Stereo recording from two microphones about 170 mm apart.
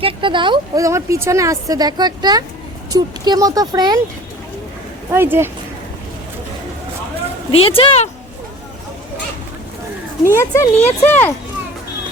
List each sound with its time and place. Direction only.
0.0 s speech: 30° right (ahead or behind)
5.1 s speech: 15° right (ahead or behind)
7.5 s speech: 35° left (ahead or behind)
10.2 s speech: 15° left (ahead or behind)